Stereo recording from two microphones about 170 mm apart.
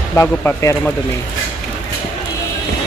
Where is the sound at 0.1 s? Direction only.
15° left (ahead or behind).